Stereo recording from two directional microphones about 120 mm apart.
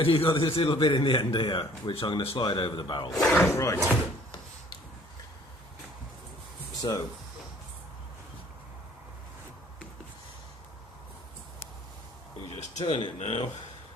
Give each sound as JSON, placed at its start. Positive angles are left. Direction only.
{"t": 0.0, "sound": "a man's voice", "side_deg": 50}
{"t": 3.1, "sound": "speech", "side_deg": 0}
{"t": 3.4, "sound": "speech", "side_deg": 25}
{"t": 6.8, "sound": "speech", "side_deg": 30}
{"t": 12.8, "sound": "a man's voice", "side_deg": 45}
{"t": 13.1, "sound": "speech", "side_deg": 65}